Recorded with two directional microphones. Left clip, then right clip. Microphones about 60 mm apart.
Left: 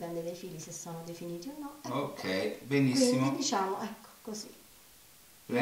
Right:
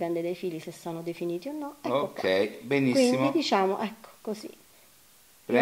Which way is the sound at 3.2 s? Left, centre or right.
Left.